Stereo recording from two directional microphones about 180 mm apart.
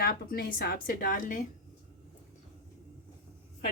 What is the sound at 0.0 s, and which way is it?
Speech, 55° left (ahead or behind).